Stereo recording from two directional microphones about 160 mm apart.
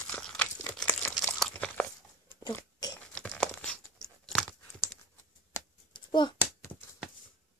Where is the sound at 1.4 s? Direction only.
5° left (ahead or behind).